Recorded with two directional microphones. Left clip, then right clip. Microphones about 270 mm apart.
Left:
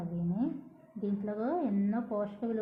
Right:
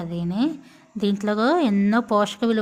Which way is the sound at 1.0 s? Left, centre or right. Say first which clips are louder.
Right 13 dB; right.